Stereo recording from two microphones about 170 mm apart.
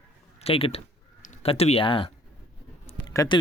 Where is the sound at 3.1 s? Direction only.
20° left (ahead or behind).